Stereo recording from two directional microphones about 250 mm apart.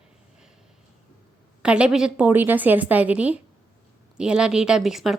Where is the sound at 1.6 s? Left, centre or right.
Centre.